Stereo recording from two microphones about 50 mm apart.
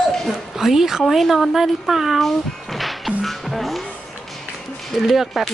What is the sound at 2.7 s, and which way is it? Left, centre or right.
Music, centre.